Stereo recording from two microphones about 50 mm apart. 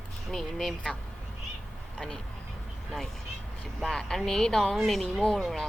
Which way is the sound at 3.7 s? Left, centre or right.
Centre.